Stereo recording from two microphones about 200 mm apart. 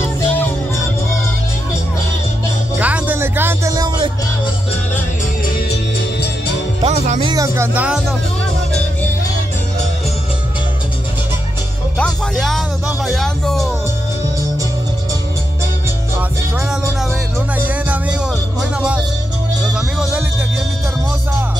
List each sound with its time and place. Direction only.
2.8 s music: 10° right (ahead or behind)
6.8 s music: 30° right (ahead or behind)
7.3 s music: 15° right (ahead or behind)
12.0 s speech: centre (ahead or behind)
17.6 s music: 10° right (ahead or behind)